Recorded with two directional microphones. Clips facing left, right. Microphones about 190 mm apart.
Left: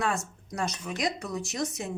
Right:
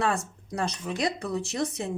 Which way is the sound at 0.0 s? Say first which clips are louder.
Right 3 dB; 30° right (ahead or behind).